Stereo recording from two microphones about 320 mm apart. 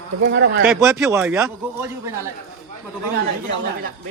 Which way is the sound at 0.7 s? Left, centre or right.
Centre.